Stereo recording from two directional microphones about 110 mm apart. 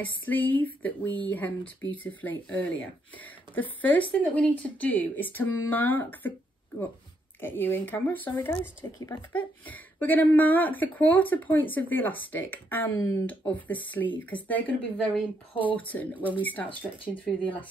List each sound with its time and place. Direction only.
0.2 s speech: 15° left (ahead or behind)
7.4 s speech: 20° left (ahead or behind)